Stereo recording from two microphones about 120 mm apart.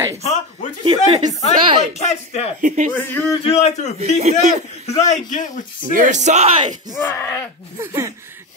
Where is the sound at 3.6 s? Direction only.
70° left (ahead or behind).